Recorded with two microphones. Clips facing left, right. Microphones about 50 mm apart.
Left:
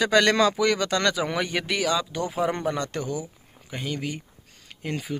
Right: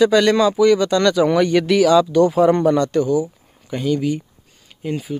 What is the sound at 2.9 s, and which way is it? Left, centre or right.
Speech, left.